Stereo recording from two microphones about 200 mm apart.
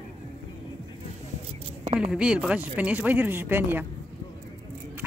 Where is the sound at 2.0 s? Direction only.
5° right (ahead or behind).